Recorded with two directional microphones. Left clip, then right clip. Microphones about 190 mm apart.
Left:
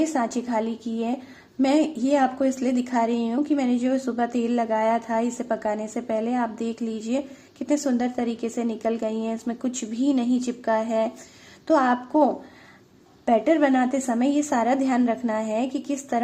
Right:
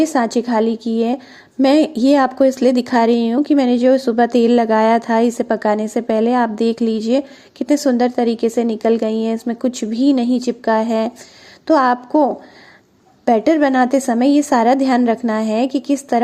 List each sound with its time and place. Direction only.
0.0 s a woman's voice: 35° right (ahead or behind)